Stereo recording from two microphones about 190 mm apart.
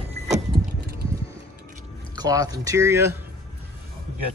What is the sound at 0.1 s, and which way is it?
Vehicle, 30° right (ahead or behind).